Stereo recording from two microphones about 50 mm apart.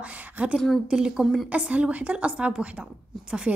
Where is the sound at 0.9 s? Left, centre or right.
Centre.